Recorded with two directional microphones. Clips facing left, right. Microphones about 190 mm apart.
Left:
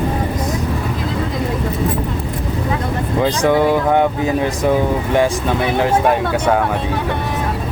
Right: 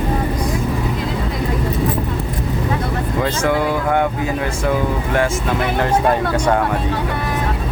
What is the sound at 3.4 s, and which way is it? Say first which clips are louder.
Speech: left 5 dB; 20° left (ahead or behind).